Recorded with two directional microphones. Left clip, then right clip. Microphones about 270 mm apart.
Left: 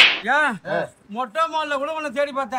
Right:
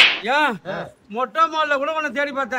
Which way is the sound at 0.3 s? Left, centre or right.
Right.